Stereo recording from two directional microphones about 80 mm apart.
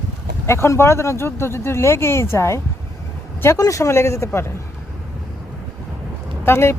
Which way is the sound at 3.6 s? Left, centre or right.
Left.